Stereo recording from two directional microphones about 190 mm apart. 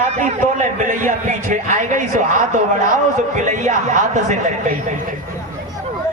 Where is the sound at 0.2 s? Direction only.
45° right (ahead or behind).